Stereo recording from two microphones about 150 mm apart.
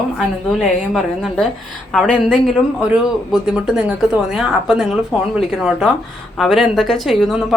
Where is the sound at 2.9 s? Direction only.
5° right (ahead or behind).